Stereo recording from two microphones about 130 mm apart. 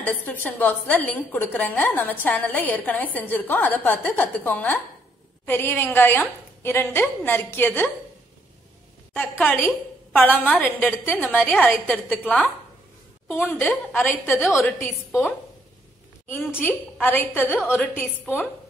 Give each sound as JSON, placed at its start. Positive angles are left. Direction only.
{"t": 0.0, "sound": "a woman's voice", "side_deg": 15}
{"t": 9.1, "sound": "a woman's voice", "side_deg": 15}
{"t": 16.3, "sound": "a woman's voice", "side_deg": 15}